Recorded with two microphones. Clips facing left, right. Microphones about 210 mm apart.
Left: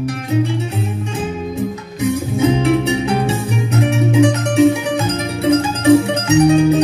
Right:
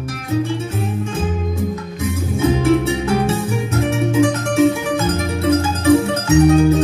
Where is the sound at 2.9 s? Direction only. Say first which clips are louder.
Left 1 dB; 20° left (ahead or behind).